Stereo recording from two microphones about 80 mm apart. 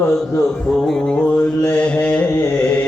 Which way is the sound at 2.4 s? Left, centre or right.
Left.